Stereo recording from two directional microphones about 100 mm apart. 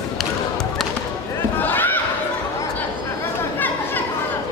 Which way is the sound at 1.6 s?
20° left (ahead or behind).